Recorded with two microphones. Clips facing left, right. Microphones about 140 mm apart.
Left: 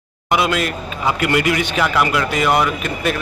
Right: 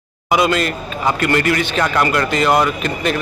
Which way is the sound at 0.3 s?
5° left (ahead or behind).